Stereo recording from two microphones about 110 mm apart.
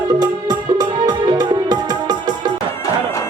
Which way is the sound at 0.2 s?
40° right (ahead or behind).